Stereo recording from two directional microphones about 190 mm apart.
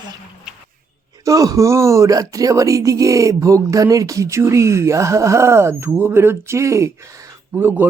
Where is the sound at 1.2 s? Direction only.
20° right (ahead or behind).